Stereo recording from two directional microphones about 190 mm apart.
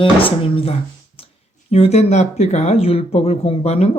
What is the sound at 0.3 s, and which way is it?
Speech, 30° left (ahead or behind).